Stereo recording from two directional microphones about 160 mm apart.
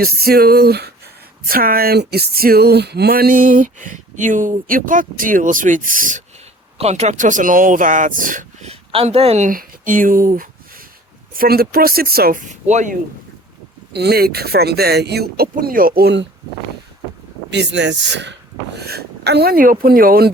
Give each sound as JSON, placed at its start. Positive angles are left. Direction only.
{"t": 0.2, "sound": "speech", "side_deg": -75}
{"t": 1.5, "sound": "a sound", "side_deg": -65}
{"t": 6.7, "sound": "speech", "side_deg": -40}
{"t": 8.7, "sound": "a woman's voice", "side_deg": -35}
{"t": 9.5, "sound": "speech", "side_deg": -60}
{"t": 13.9, "sound": "speech", "side_deg": -85}
{"t": 17.5, "sound": "speech", "side_deg": -90}